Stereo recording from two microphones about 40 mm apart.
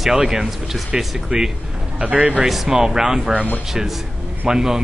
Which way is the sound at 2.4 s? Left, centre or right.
Centre.